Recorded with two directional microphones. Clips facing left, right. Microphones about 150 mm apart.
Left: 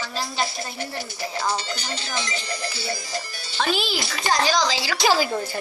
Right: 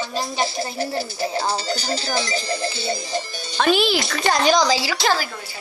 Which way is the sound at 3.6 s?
65° right (ahead or behind).